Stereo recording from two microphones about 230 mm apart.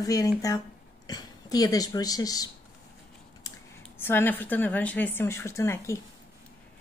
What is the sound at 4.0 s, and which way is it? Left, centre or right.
A woman's voice, centre.